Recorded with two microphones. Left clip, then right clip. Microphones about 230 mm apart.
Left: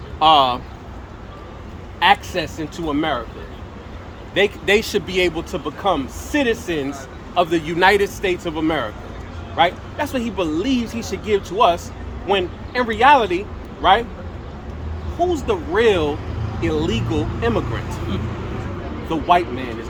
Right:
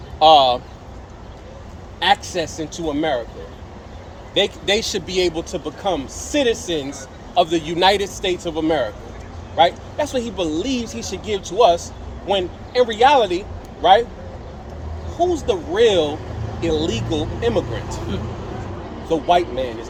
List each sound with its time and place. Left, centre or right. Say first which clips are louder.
0.2 s speech: right 2 dB; centre
2.0 s speech: left 2 dB; centre
4.4 s speech: left 2 dB; centre
15.2 s speech: right 1 dB; centre
19.0 s speech: even; centre